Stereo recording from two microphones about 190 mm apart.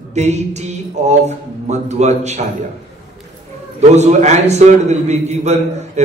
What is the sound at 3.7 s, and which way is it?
A man's voice, 35° right (ahead or behind).